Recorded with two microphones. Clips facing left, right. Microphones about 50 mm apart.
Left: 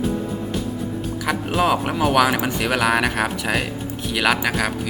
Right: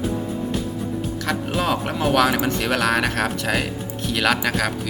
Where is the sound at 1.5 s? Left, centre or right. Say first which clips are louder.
Left 5 dB; centre.